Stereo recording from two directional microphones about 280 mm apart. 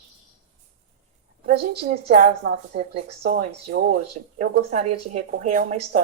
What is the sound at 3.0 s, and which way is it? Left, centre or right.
A woman's voice, right.